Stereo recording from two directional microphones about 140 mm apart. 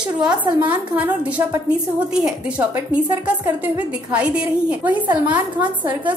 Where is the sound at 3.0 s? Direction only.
20° right (ahead or behind).